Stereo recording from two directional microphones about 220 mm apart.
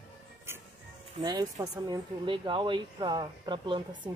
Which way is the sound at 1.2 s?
15° right (ahead or behind).